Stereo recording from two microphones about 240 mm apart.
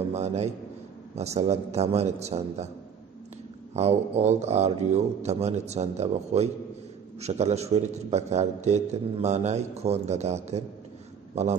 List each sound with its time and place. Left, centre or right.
0.1 s a man's voice: right
3.7 s a man's voice: right